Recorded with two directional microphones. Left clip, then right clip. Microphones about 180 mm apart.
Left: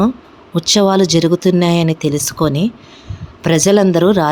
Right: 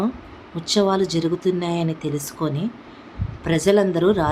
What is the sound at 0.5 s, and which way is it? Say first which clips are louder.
Speech: left 7 dB; 50° left (ahead or behind).